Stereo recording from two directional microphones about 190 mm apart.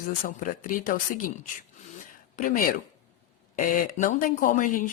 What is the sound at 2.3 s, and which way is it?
A woman's voice, 45° left (ahead or behind).